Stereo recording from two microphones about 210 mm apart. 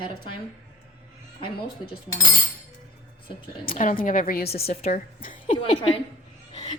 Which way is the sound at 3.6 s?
40° left (ahead or behind).